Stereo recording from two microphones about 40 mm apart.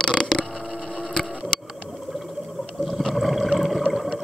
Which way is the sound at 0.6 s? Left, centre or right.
Centre.